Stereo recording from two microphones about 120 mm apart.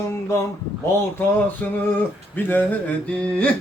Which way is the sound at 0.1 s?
25° left (ahead or behind).